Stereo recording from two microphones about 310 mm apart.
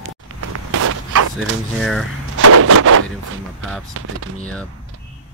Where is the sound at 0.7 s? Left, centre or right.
Right.